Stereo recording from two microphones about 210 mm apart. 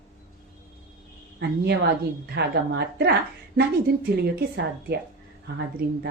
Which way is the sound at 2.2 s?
50° right (ahead or behind).